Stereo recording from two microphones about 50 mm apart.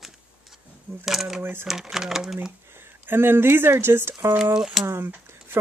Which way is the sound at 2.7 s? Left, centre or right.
Right.